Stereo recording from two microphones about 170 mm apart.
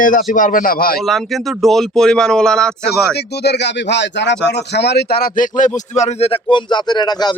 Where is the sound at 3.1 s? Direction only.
75° left (ahead or behind); by 7.4 s 25° left (ahead or behind).